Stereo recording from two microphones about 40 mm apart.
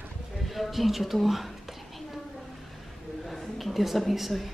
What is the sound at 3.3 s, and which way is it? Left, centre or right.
A woman's voice, centre.